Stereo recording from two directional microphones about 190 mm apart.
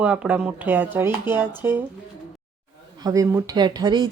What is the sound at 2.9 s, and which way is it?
Speech, 20° right (ahead or behind).